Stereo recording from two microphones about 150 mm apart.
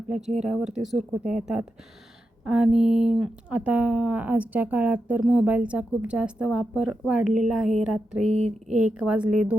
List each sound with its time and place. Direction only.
0.3 s speech: 5° right (ahead or behind)
8.3 s speech: 50° right (ahead or behind)
8.9 s speech: 5° right (ahead or behind)